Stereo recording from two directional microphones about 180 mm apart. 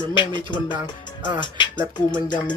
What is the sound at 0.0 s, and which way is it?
Speech, 25° left (ahead or behind).